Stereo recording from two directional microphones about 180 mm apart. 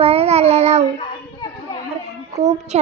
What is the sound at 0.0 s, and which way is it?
Child singing, 35° right (ahead or behind).